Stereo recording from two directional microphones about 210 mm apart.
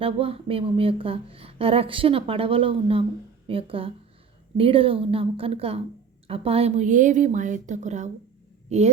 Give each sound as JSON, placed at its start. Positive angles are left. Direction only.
{"t": 0.0, "sound": "a woman's voice", "side_deg": -25}